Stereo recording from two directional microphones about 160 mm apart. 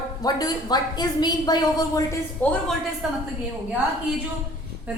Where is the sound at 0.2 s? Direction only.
25° left (ahead or behind).